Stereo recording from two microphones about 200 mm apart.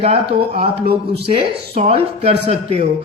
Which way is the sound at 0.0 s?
30° right (ahead or behind).